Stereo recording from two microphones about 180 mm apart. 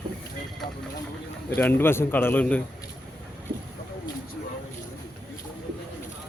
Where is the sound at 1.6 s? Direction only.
10° left (ahead or behind).